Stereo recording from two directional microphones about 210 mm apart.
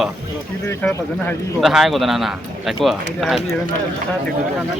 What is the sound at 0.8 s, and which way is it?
Speech, 5° left (ahead or behind).